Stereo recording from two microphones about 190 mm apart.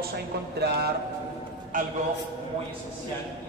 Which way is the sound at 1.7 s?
45° right (ahead or behind).